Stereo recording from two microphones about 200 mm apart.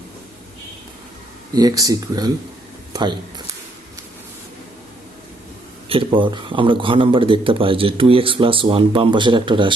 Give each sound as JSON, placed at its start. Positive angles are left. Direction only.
{"t": 1.5, "sound": "speech", "side_deg": -20}
{"t": 5.9, "sound": "speech", "side_deg": -25}